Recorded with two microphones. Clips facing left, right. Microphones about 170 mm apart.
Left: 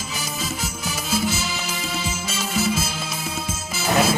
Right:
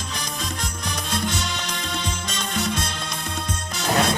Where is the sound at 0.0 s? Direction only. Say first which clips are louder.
Left 1 dB; 5° left (ahead or behind).